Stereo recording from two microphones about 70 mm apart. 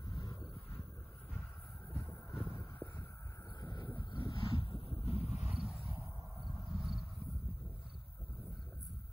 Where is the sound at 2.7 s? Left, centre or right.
Left.